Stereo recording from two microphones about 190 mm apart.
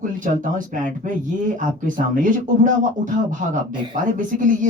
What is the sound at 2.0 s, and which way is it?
Speech, 45° right (ahead or behind).